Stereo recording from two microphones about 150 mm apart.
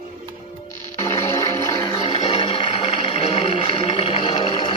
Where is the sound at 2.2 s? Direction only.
40° left (ahead or behind).